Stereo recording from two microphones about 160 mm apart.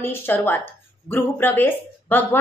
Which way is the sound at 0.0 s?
15° left (ahead or behind).